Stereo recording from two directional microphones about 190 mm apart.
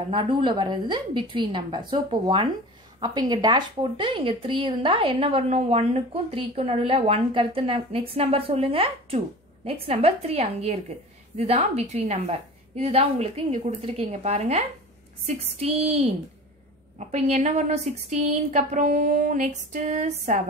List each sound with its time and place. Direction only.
0.1 s a woman's voice: 25° right (ahead or behind)